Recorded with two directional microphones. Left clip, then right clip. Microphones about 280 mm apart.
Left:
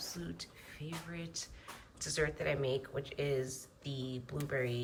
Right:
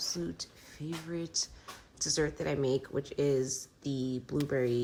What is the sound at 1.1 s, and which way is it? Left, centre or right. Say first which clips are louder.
Speech: right 9 dB; centre.